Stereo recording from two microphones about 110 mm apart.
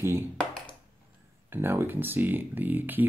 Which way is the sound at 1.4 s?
20° right (ahead or behind).